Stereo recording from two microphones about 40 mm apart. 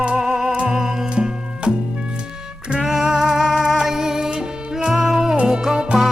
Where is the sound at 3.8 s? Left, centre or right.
Centre.